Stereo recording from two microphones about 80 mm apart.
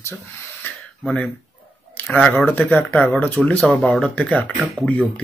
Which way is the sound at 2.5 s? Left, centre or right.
Left.